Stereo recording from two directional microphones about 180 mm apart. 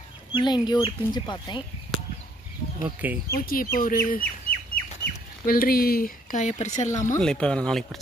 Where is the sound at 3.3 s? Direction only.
55° left (ahead or behind).